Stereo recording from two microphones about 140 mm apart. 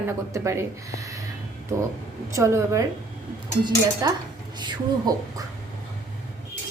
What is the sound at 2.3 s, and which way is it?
Speech, 20° right (ahead or behind).